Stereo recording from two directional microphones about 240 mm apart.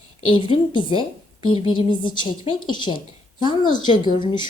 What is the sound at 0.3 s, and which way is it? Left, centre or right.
A woman's voice, left.